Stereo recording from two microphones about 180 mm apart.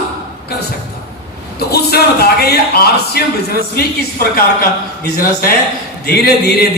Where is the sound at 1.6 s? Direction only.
60° left (ahead or behind).